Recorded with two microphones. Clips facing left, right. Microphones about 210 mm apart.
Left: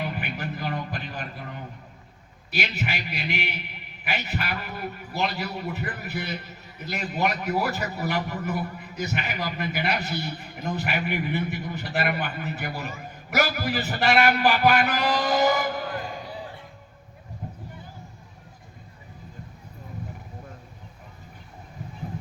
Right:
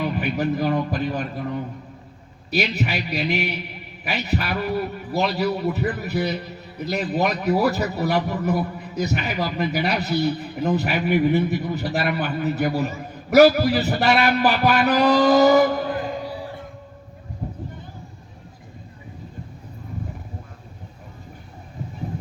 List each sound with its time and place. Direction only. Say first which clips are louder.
0.0 s a man's voice: right 8 dB; 40° right (ahead or behind)